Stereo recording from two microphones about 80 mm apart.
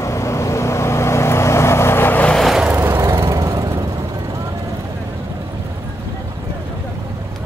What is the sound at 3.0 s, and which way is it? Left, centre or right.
Vehicle, right.